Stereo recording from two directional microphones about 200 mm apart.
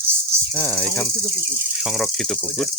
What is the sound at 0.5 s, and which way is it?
Cricket, 10° left (ahead or behind).